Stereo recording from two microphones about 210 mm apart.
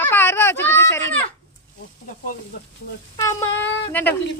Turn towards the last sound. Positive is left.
turn(degrees=10)  # may be behind; listen again after turning